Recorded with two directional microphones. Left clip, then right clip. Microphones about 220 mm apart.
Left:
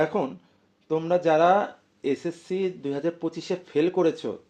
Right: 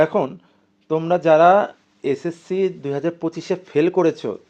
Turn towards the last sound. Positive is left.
turn(degrees=-35)  # may be behind; listen again after turning